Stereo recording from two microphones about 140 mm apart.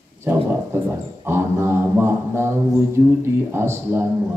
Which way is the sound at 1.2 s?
15° right (ahead or behind).